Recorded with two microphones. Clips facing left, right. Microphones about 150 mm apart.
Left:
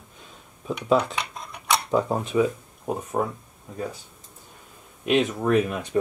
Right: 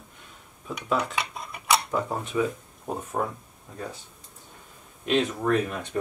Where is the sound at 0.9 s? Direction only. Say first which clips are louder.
Left 4 dB; 5° right (ahead or behind).